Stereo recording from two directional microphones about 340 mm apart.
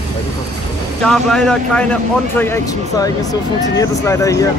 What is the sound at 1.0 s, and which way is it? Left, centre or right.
Speech, centre.